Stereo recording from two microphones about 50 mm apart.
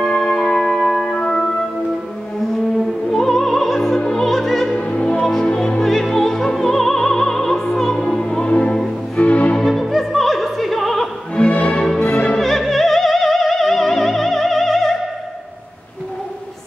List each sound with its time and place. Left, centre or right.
0.0 s music: centre
4.0 s opera: centre
4.7 s music: left
5.8 s opera: centre
9.1 s music: left
9.6 s opera: centre
11.3 s music: left
12.4 s music: centre